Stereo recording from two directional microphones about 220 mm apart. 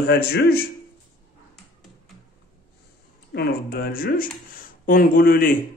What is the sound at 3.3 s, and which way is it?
Speech, 45° left (ahead or behind).